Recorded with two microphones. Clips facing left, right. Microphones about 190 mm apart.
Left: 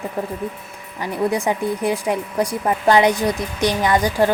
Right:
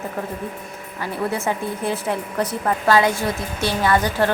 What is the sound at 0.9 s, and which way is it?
A woman's voice, 15° left (ahead or behind).